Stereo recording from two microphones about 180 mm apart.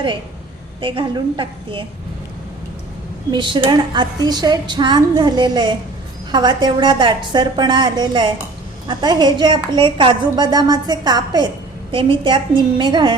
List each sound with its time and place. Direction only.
0.8 s a woman's voice: 30° right (ahead or behind)
3.3 s a woman's voice: 25° right (ahead or behind)